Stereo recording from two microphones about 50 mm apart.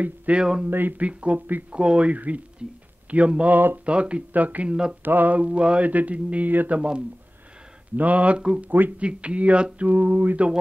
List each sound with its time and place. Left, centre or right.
0.0 s speech: right
0.4 s speech: centre
0.7 s speech: right
0.9 s speech: right
3.5 s speech: right
3.8 s speech: right
4.3 s speech: right
7.9 s speech: right
9.0 s speech: right